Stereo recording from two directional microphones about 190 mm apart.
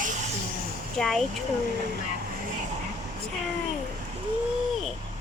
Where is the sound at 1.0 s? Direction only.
Centre (ahead or behind).